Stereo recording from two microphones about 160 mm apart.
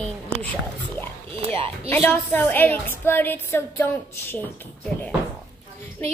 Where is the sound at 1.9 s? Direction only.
10° left (ahead or behind).